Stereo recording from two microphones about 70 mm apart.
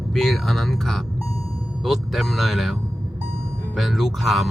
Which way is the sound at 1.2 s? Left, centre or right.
Left.